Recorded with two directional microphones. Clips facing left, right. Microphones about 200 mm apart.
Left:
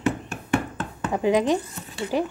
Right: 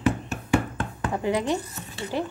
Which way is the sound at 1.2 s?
15° left (ahead or behind).